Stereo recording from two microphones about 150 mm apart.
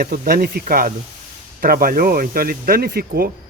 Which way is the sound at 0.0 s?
80° right.